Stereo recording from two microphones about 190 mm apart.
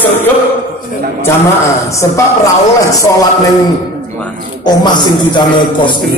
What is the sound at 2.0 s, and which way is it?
Speech, 15° left (ahead or behind).